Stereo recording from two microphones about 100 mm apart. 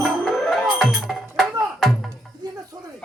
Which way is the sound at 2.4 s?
45° right (ahead or behind).